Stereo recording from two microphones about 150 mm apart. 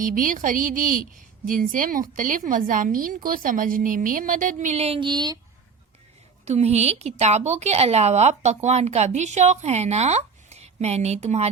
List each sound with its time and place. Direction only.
0.0 s a woman's voice: 65° right (ahead or behind); by 5.4 s 30° right (ahead or behind)
6.4 s a woman's voice: 45° right (ahead or behind)